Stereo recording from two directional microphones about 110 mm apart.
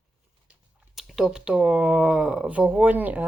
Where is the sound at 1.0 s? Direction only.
Centre (ahead or behind).